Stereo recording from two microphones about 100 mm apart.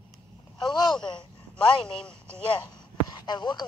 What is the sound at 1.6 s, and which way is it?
Speech, 5° left (ahead or behind).